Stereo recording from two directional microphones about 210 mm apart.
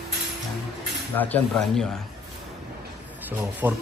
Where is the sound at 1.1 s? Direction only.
5° left (ahead or behind).